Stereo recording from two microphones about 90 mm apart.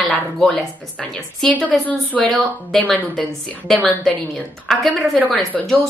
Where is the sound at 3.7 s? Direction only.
15° left (ahead or behind).